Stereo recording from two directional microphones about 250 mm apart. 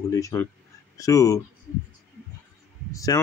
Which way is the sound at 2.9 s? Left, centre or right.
Centre.